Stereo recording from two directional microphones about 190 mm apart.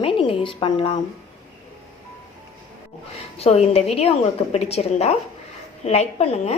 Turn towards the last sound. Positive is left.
turn(degrees=35)  # may be behind; listen again after turning